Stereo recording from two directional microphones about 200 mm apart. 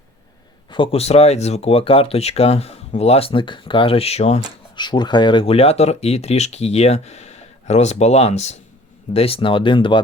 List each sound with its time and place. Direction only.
0.7 s speech: 25° left (ahead or behind)